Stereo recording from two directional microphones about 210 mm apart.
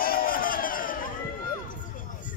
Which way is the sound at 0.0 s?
45° left (ahead or behind).